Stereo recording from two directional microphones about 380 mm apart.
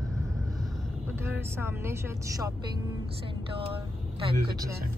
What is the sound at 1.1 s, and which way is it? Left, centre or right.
Speech, centre.